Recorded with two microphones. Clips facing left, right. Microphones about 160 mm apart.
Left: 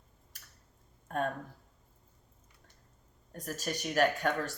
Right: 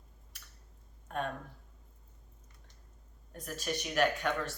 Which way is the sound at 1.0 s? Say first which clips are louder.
Left 3 dB; 45° left (ahead or behind).